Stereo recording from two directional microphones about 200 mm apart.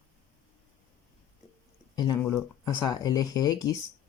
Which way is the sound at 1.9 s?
20° left (ahead or behind).